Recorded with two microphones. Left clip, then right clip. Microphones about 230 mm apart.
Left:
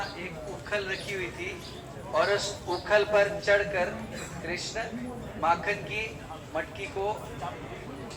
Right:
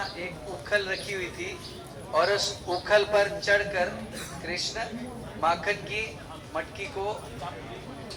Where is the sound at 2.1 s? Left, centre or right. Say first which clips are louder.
Right 2 dB; right.